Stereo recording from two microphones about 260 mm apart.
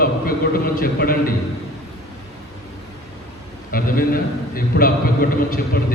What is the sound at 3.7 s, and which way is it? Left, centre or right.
A man's voice, left.